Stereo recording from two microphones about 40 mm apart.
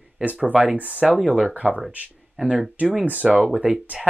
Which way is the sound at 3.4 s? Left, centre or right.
Right.